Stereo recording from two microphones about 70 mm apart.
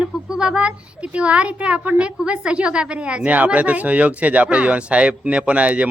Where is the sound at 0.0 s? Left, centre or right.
Centre.